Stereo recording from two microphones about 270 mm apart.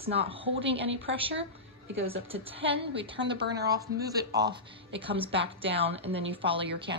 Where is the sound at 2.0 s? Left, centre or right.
Right.